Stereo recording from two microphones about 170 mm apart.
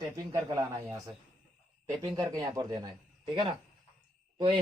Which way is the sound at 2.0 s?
20° right (ahead or behind).